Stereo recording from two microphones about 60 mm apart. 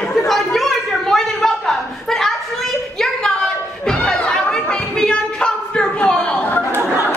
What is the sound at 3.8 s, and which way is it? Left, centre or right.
Chatter, centre.